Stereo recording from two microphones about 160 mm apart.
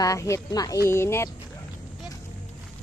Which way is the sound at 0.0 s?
20° left (ahead or behind).